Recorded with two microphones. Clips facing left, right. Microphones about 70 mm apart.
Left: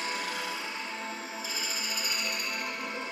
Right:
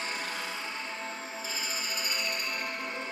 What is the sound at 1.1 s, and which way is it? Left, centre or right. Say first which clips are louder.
Music: even; right.